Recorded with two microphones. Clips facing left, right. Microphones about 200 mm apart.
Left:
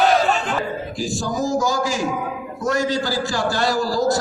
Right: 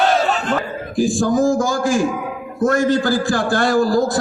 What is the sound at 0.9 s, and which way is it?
A man's voice, 50° right (ahead or behind).